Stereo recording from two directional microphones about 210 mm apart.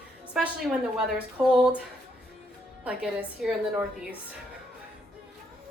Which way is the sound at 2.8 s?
5° right (ahead or behind).